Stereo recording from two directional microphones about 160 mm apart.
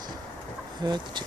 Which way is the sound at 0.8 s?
25° right (ahead or behind).